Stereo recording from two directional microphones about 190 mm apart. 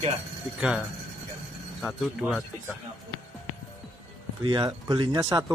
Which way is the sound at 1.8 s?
5° right (ahead or behind).